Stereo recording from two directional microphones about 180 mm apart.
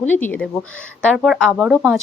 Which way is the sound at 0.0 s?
10° left (ahead or behind).